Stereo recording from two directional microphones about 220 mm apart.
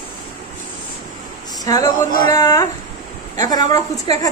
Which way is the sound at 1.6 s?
15° left (ahead or behind).